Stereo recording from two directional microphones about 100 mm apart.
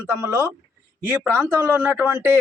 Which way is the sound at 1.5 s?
25° right (ahead or behind).